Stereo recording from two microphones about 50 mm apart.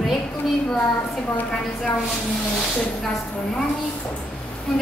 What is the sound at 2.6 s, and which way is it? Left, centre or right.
Speech, centre.